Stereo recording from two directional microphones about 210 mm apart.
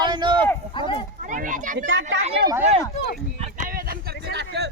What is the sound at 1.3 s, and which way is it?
Speech, 40° right (ahead or behind).